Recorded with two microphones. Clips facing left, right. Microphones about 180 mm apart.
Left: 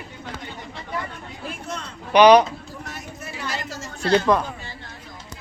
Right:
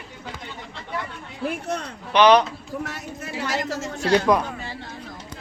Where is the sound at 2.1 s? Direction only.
10° left (ahead or behind).